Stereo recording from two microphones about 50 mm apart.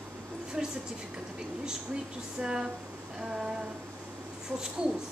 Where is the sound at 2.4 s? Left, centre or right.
Centre.